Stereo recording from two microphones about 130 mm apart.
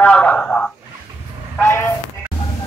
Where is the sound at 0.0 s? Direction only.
10° left (ahead or behind).